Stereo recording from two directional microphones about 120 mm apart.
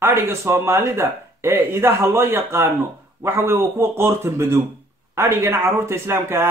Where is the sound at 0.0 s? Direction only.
20° right (ahead or behind).